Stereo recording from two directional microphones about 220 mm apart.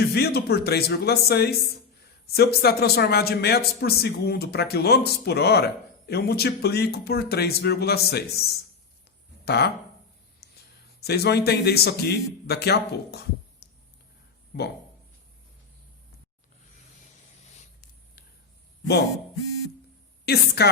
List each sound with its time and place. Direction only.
0.1 s speech: 45° left (ahead or behind)
10.4 s a sound: 45° left (ahead or behind)
11.0 s speech: 45° left (ahead or behind)
14.5 s speech: 50° left (ahead or behind)
17.4 s a sound: 30° left (ahead or behind)
20.2 s speech: 45° left (ahead or behind)